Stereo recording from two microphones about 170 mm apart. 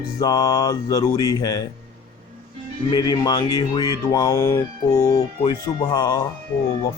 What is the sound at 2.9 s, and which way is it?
Speech, 25° left (ahead or behind).